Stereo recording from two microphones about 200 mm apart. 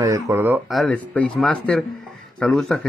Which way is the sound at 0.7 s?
5° left (ahead or behind).